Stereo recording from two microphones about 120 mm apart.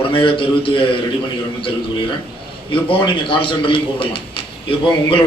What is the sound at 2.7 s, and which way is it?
A man's voice, 45° left (ahead or behind).